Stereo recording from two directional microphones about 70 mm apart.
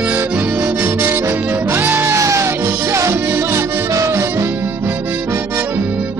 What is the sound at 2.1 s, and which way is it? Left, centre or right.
Music, right.